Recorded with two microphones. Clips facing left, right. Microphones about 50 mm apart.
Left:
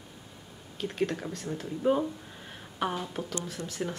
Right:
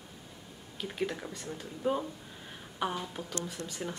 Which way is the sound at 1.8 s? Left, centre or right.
Centre.